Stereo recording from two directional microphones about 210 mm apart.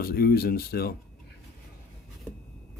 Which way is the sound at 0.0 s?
45° left (ahead or behind).